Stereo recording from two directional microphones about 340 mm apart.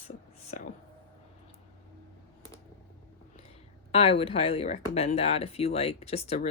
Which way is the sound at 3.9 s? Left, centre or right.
Centre.